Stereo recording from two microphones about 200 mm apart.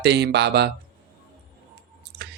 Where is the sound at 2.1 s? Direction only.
55° right (ahead or behind).